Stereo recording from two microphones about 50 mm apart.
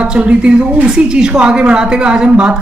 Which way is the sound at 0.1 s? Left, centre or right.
Right.